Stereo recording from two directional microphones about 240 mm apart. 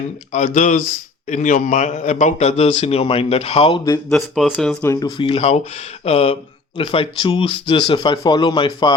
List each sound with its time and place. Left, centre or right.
0.3 s a man's voice: left
4.1 s a man's voice: centre